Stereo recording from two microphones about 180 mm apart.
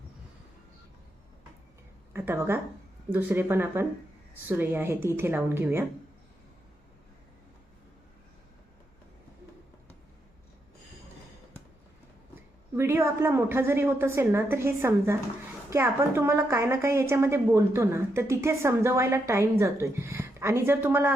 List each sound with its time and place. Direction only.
2.1 s a woman's voice: 15° right (ahead or behind)
12.7 s a woman's voice: 15° right (ahead or behind)